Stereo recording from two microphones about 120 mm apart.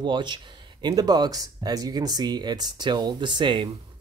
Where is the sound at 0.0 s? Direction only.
40° right (ahead or behind).